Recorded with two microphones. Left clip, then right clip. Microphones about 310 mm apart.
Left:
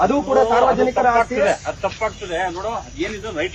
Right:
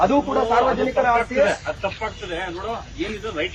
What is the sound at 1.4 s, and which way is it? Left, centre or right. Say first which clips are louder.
Speech: left 1 dB; centre.